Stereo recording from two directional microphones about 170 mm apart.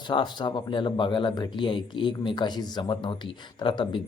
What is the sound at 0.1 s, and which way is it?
Speech, 25° left (ahead or behind).